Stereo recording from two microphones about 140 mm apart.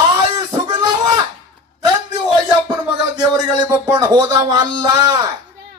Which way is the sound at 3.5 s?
30° right (ahead or behind).